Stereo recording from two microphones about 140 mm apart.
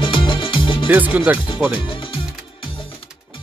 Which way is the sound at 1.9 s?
40° left (ahead or behind).